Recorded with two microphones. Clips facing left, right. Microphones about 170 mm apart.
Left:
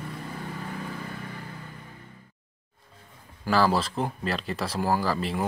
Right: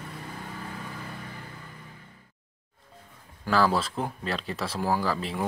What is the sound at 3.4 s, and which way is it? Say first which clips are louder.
Speech: left 1 dB; 5° left (ahead or behind).